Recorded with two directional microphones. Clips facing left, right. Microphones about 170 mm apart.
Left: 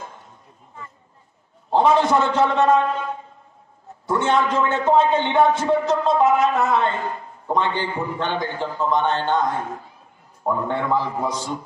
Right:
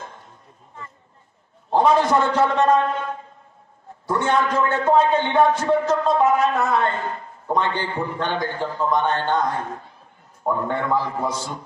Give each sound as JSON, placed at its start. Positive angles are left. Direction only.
{"t": 1.7, "sound": "a sound", "side_deg": 5}
{"t": 2.2, "sound": "a man's voice", "side_deg": 10}
{"t": 4.1, "sound": "a man's voice", "side_deg": 20}
{"t": 9.4, "sound": "a man's voice", "side_deg": 5}
{"t": 10.9, "sound": "a man's voice", "side_deg": 15}